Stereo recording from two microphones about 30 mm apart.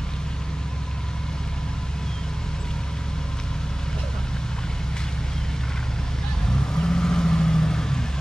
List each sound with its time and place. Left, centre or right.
6.5 s vehicle: left